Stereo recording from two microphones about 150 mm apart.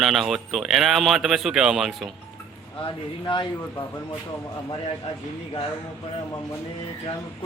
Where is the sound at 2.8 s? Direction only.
35° left (ahead or behind).